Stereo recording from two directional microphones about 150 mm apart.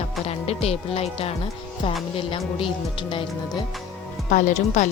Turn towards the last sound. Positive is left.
turn(degrees=55)  # may be behind; listen again after turning